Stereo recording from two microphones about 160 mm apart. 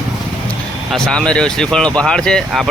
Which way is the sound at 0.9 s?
5° left (ahead or behind).